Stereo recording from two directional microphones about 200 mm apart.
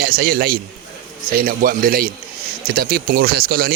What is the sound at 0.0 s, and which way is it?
A man's voice, 50° right (ahead or behind).